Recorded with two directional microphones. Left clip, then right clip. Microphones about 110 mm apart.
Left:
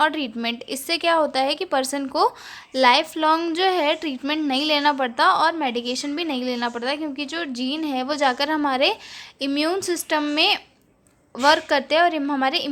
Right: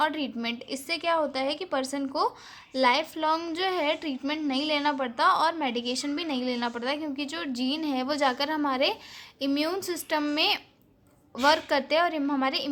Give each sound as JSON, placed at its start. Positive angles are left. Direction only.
{"t": 0.0, "sound": "a woman's voice", "side_deg": 30}
{"t": 0.9, "sound": "a woman's voice", "side_deg": 40}